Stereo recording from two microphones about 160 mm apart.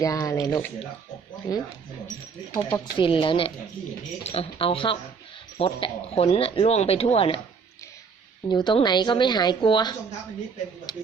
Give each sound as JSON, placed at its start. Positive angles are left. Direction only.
{"t": 0.0, "sound": "a woman's voice", "side_deg": 20}
{"t": 2.7, "sound": "speech", "side_deg": 30}
{"t": 8.4, "sound": "a woman's voice", "side_deg": 30}